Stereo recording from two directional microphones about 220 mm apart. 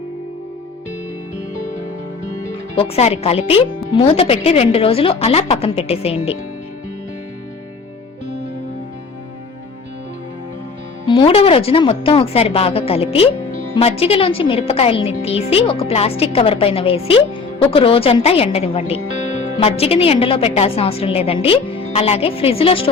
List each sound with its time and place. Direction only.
2.7 s a woman's voice: 25° left (ahead or behind)
11.0 s a woman's voice: 20° left (ahead or behind)